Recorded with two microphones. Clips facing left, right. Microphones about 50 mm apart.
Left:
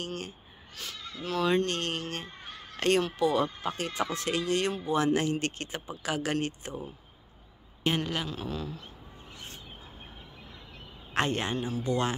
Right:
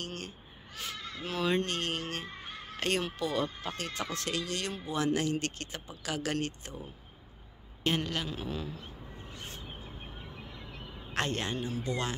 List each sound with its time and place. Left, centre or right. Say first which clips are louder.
0.0 s speech: left 4 dB; centre
0.7 s speech: even; centre
1.7 s speech: left 2 dB; centre
3.2 s speech: left 6 dB; centre
7.8 s speech: left 2 dB; centre
8.3 s speech: left 2 dB; centre
11.1 s speech: left 4 dB; left
11.5 s speech: left 3 dB; centre
11.8 s speech: left 8 dB; left